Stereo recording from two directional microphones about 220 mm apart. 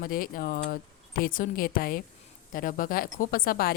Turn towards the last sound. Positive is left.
turn(degrees=40)  # may be behind; listen again after turning